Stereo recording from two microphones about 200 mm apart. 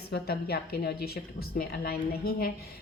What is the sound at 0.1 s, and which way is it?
Speech, 50° left (ahead or behind).